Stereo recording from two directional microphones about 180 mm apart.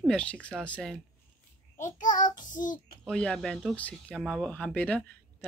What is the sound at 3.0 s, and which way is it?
Speech, 5° left (ahead or behind).